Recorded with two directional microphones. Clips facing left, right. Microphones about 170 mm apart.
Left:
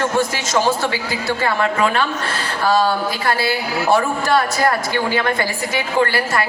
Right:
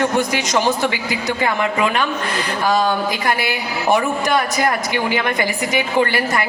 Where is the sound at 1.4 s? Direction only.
15° right (ahead or behind).